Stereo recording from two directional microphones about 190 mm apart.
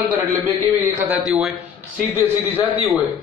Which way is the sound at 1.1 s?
5° right (ahead or behind).